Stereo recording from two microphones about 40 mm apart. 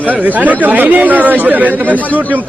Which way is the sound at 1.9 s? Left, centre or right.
Left.